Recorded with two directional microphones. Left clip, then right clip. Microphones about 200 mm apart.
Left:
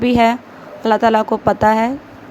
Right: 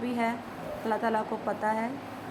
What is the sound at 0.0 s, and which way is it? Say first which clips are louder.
Speech: left 17 dB; 40° left (ahead or behind).